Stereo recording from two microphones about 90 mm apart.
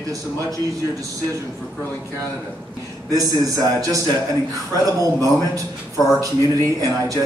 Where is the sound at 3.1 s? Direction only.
40° right (ahead or behind).